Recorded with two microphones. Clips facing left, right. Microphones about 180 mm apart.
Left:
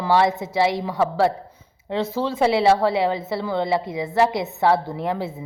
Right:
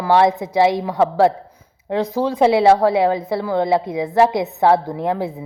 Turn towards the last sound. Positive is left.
turn(degrees=-15)  # may be behind; listen again after turning